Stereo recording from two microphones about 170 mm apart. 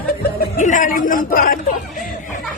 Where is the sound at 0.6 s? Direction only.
50° left (ahead or behind).